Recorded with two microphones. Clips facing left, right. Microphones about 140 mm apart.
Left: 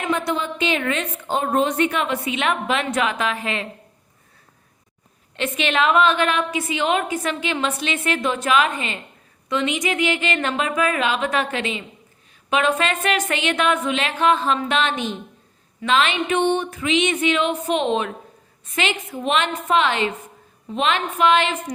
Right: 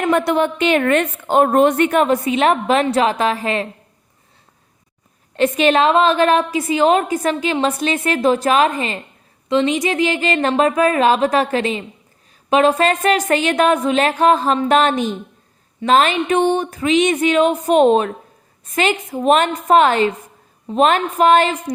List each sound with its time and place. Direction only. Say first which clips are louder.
0.0 s a woman's voice: right 7 dB; 55° right (ahead or behind); by 3.7 s 40° right (ahead or behind)
5.4 s a woman's voice: right 7 dB; 40° right (ahead or behind)